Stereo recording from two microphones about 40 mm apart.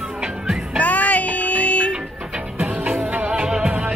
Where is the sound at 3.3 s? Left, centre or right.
Right.